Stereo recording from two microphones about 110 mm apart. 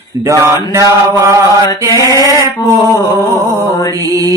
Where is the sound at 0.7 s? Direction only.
25° right (ahead or behind).